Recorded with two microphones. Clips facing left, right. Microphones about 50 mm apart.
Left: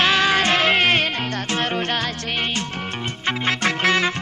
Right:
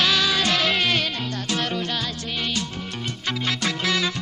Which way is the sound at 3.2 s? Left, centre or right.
Left.